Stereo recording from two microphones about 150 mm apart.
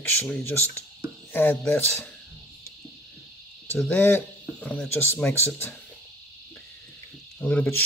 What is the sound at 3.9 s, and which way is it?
Speech, 15° left (ahead or behind).